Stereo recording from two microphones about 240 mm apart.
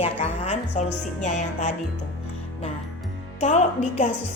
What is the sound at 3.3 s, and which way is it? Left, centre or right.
Speech, left.